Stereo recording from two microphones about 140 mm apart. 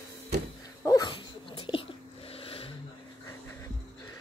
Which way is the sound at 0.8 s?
30° left (ahead or behind).